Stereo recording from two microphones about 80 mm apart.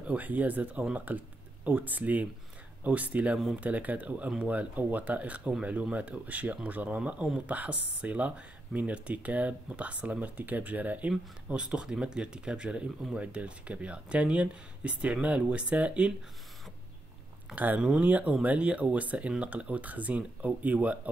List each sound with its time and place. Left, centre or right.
0.0 s speech: centre
17.6 s speech: centre